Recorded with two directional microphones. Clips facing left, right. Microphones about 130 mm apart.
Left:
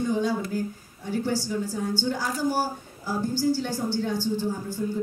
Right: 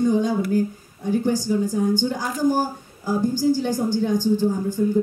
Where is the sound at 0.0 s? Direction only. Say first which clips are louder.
Right 5 dB; 15° right (ahead or behind).